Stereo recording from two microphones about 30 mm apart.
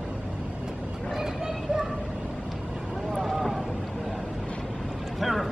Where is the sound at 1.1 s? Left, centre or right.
Centre.